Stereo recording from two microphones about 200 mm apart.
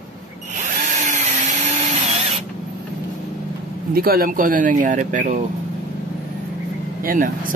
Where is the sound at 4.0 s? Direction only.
45° right (ahead or behind).